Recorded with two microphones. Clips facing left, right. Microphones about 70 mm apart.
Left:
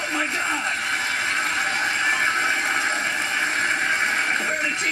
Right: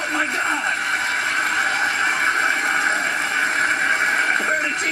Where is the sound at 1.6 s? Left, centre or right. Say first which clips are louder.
Right 3 dB; right.